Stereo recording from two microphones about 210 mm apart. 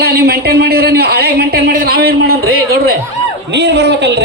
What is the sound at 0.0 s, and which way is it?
Speech, 50° right (ahead or behind).